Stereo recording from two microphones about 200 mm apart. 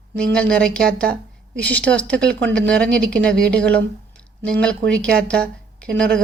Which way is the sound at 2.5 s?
5° left (ahead or behind).